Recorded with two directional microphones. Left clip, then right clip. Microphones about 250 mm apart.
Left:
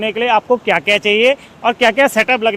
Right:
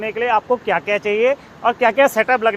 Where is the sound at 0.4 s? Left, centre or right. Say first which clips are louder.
Left 5 dB; left.